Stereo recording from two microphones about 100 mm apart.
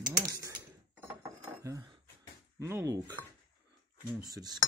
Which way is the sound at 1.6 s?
30° right (ahead or behind).